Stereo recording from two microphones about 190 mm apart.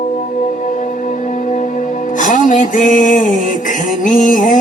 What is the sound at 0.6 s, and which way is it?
Music, 40° left (ahead or behind).